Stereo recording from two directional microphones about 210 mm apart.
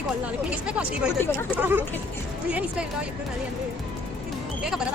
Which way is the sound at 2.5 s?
5° right (ahead or behind).